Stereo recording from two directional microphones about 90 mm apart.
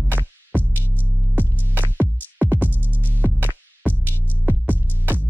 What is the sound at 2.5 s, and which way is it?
Music, 20° right (ahead or behind).